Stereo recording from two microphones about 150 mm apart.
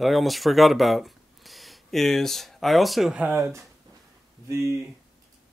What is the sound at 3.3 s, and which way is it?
Speech, 20° right (ahead or behind).